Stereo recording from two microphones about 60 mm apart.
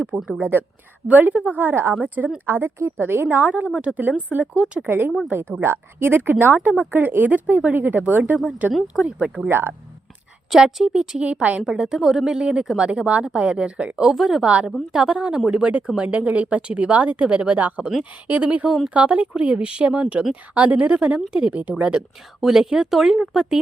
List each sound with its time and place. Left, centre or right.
0.1 s speech: right
1.0 s a woman's voice: right
4.6 s speech: centre
4.9 s a woman's voice: right; by 9.5 s centre
9.5 s a woman's voice: right
10.5 s speech: centre
14.4 s speech: right
22.4 s speech: centre